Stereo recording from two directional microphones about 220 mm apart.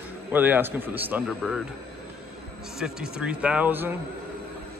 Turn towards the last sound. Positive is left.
turn(degrees=-10)  # may be behind; listen again after turning